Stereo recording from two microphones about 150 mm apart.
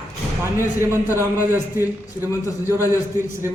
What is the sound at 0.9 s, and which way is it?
A man's voice, 15° right (ahead or behind).